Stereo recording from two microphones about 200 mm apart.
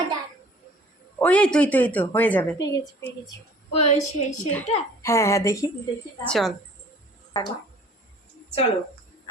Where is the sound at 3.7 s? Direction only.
35° left (ahead or behind).